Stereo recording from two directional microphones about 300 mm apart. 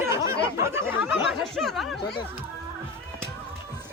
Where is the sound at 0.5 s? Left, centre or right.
Centre.